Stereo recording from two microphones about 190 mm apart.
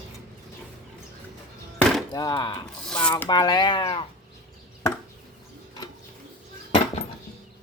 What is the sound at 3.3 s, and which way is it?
Speech, 20° left (ahead or behind).